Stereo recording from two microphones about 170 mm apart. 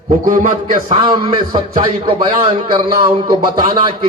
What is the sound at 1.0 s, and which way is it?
Speech, 25° right (ahead or behind).